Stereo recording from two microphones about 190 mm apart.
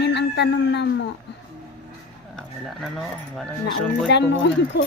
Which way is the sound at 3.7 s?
70° left (ahead or behind).